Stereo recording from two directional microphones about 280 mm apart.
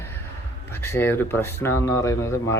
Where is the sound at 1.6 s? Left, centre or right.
Centre.